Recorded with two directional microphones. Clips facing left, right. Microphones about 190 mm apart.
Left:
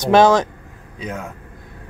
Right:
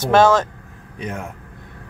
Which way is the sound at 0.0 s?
15° left (ahead or behind).